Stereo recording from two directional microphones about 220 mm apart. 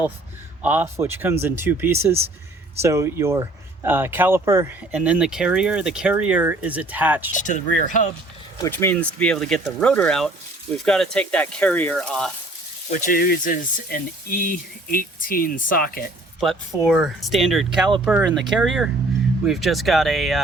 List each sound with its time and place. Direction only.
0.6 s speech: 10° right (ahead or behind)
7.3 s speech: 35° left (ahead or behind)
8.5 s speech: 15° left (ahead or behind)
12.9 s speech: 40° left (ahead or behind)
16.4 s speech: centre (ahead or behind)